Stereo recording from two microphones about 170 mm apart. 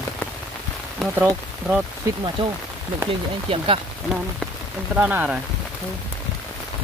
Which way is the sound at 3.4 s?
35° right (ahead or behind).